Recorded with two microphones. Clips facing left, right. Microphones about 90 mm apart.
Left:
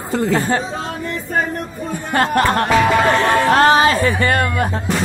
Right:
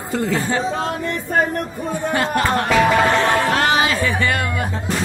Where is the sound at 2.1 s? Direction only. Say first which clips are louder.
Left 5 dB; 50° left (ahead or behind).